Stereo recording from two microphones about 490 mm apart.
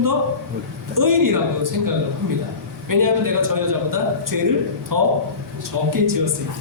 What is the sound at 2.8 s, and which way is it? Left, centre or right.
A man's voice, right.